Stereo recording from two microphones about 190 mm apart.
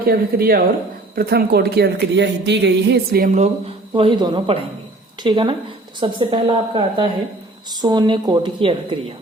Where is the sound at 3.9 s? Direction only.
25° right (ahead or behind).